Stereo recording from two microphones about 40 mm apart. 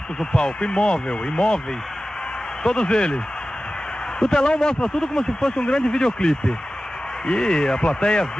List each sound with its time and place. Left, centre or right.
0.2 s speech: left
2.6 s speech: left
4.2 s speech: centre